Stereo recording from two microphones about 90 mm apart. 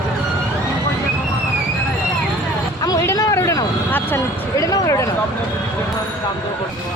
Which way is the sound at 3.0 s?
35° left (ahead or behind).